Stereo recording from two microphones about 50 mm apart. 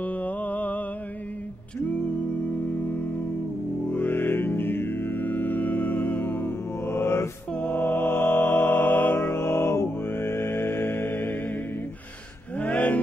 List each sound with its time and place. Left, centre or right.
0.0 s mantra: left
3.9 s music: left
6.9 s mantra: left
7.7 s music: left
12.5 s music: left